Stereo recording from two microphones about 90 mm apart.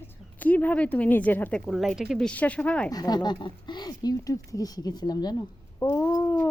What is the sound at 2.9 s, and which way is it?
Speech, 45° left (ahead or behind).